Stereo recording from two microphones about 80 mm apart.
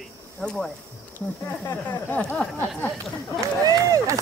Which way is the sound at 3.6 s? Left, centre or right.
Right.